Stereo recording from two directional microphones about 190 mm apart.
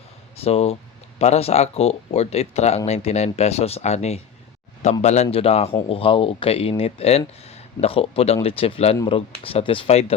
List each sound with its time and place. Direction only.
0.3 s speech: 30° left (ahead or behind)